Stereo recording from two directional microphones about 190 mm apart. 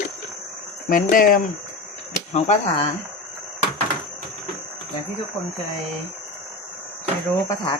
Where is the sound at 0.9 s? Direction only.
50° left (ahead or behind).